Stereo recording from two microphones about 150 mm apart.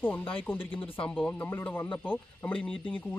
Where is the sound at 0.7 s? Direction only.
35° left (ahead or behind).